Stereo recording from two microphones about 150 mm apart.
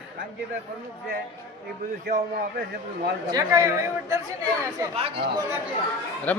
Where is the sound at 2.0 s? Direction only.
75° right (ahead or behind).